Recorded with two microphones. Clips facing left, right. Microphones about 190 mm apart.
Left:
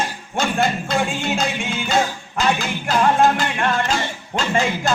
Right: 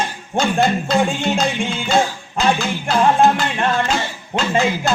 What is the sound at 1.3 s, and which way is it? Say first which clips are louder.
Music: right 3 dB; 30° right (ahead or behind).